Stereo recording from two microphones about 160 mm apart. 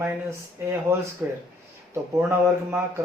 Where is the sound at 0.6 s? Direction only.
15° right (ahead or behind).